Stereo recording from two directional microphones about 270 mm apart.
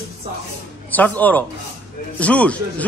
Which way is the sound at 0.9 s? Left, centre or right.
Centre.